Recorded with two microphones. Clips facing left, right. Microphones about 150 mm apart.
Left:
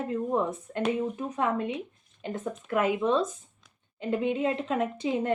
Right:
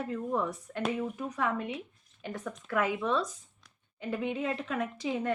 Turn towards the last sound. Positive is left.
turn(degrees=25)  # may be behind; listen again after turning